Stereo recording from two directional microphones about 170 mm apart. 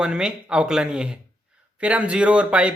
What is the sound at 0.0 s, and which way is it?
Speech, 5° right (ahead or behind).